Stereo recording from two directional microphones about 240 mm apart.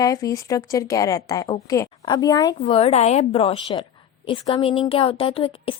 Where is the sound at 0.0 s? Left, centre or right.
Centre.